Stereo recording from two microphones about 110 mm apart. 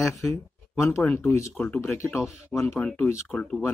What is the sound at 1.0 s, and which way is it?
Speech, 10° left (ahead or behind).